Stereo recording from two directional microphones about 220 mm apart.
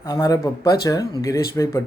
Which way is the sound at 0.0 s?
15° left (ahead or behind).